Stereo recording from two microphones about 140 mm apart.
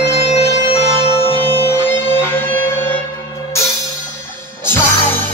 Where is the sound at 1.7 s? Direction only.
15° left (ahead or behind).